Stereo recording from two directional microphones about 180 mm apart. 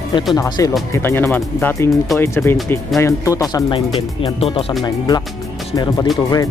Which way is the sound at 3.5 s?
30° left (ahead or behind).